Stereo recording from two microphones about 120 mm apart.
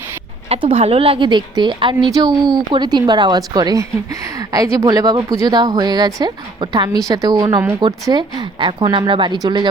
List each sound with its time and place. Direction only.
0.4 s a woman's voice: 55° right (ahead or behind); by 9.6 s 35° right (ahead or behind)